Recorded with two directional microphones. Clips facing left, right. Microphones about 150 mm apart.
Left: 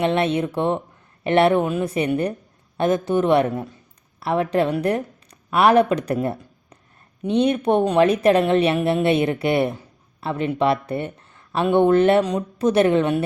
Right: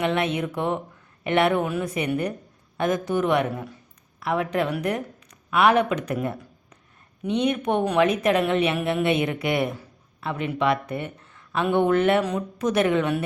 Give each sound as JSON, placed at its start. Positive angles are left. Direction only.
{"t": 0.0, "sound": "a woman's voice", "side_deg": 30}